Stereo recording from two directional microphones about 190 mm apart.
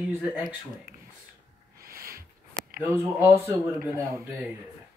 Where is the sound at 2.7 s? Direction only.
15° right (ahead or behind).